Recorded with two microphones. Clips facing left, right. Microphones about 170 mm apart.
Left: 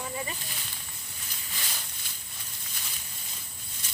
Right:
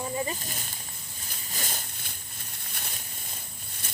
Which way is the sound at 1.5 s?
45° right (ahead or behind).